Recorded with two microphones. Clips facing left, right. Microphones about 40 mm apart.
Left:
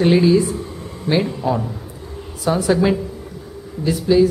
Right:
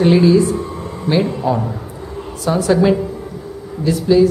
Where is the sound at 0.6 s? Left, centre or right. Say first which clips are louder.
Right 5 dB; right.